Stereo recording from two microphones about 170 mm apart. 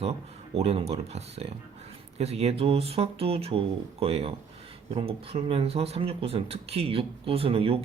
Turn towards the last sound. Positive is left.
turn(degrees=-35)  # may be behind; listen again after turning